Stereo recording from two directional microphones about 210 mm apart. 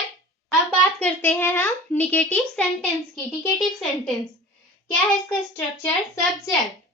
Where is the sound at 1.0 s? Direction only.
10° left (ahead or behind).